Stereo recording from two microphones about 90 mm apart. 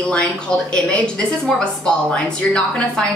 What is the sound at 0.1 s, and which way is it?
A woman's voice, 10° left (ahead or behind).